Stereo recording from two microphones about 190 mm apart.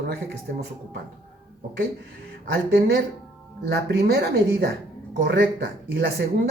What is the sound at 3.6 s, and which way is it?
A woman's voice, 55° right (ahead or behind).